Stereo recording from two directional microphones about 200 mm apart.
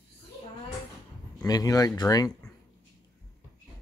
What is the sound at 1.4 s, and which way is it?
Speech, 20° left (ahead or behind).